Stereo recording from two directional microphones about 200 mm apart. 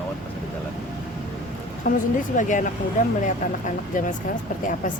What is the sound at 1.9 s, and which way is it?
Speech, 40° left (ahead or behind).